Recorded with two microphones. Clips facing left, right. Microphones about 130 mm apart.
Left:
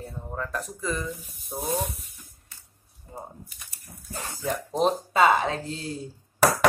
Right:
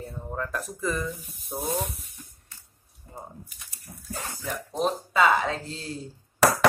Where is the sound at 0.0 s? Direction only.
Centre (ahead or behind).